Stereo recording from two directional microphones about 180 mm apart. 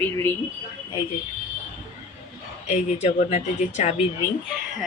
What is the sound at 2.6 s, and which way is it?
Speech, 40° left (ahead or behind).